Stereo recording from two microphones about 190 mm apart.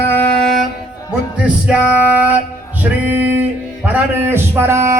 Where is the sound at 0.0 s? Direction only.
10° left (ahead or behind).